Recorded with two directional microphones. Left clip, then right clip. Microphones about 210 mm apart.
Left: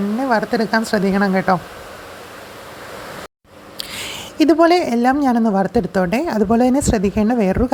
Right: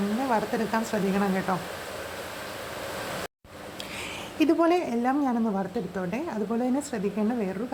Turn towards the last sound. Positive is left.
turn(degrees=35)  # may be behind; listen again after turning